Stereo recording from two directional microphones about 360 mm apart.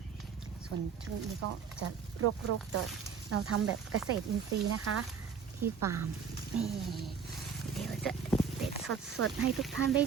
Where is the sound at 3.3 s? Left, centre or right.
Right.